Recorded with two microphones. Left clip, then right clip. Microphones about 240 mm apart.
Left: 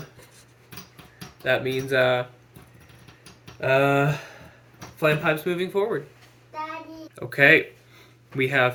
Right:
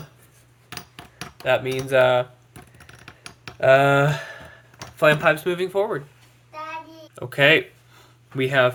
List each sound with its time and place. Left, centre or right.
1.5 s speech: right
3.6 s speech: right
7.2 s a sound: right